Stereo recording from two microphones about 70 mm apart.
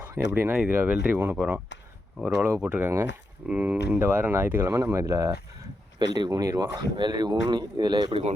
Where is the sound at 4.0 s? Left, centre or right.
Right.